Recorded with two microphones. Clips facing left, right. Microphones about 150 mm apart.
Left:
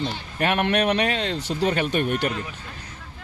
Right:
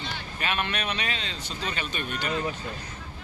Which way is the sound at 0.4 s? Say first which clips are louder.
Left 9 dB; 60° left (ahead or behind).